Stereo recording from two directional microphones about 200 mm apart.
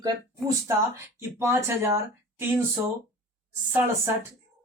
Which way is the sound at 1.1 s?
10° right (ahead or behind).